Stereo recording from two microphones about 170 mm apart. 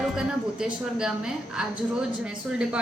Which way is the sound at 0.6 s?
5° right (ahead or behind).